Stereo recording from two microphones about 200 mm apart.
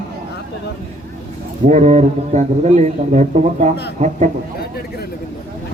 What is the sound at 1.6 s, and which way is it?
Speech, 35° right (ahead or behind).